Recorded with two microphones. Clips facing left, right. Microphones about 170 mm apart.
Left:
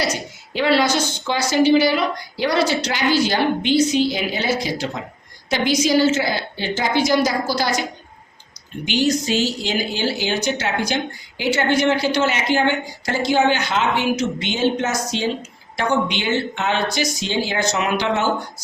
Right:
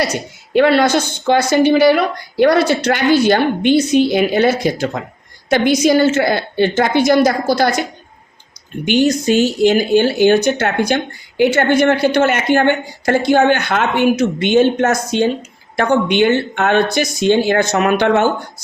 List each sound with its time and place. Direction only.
0.0 s speech: 55° right (ahead or behind)